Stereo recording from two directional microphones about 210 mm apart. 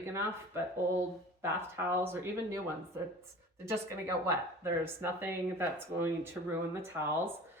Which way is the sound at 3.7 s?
15° right (ahead or behind).